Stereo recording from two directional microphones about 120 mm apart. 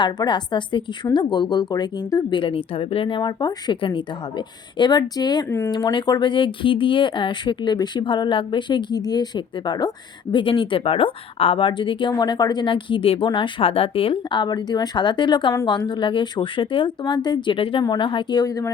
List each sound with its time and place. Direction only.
0.0 s speech: 40° left (ahead or behind)
2.4 s speech: 50° left (ahead or behind)
3.2 s speech: 35° left (ahead or behind)
5.5 s speech: 20° left (ahead or behind)
5.7 s speech: 40° left (ahead or behind)